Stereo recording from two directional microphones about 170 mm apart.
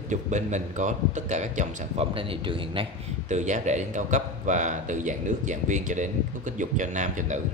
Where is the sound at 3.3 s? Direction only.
45° right (ahead or behind).